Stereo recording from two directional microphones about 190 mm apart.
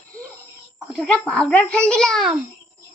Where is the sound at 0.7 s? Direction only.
5° left (ahead or behind).